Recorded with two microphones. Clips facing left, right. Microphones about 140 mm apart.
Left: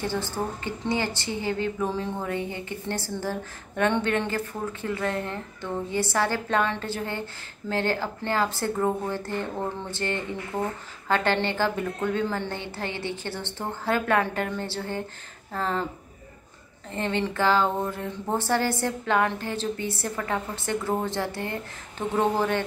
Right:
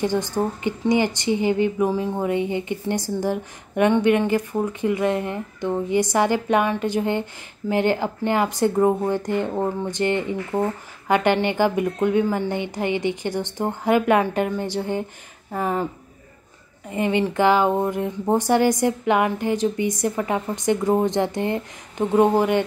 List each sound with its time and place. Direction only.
0.0 s a woman's voice: 15° right (ahead or behind)
16.9 s a woman's voice: 15° right (ahead or behind)